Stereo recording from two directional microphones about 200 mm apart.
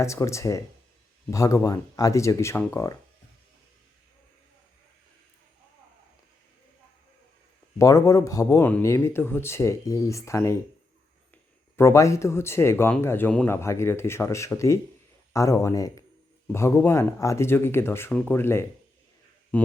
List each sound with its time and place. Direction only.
0.0 s speech: 15° left (ahead or behind)
7.8 s speech: 15° left (ahead or behind)
11.8 s speech: 15° left (ahead or behind)